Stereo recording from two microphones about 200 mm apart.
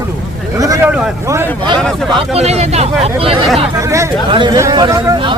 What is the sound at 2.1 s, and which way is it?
Speech, 30° right (ahead or behind).